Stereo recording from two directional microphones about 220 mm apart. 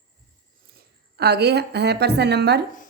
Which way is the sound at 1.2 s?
50° right (ahead or behind).